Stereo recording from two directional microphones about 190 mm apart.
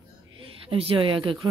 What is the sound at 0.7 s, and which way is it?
Speech, 30° right (ahead or behind).